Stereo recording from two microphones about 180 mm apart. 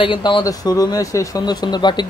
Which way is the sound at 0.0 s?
30° left (ahead or behind).